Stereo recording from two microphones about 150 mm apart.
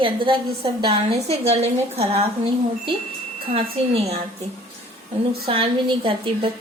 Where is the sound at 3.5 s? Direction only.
45° right (ahead or behind).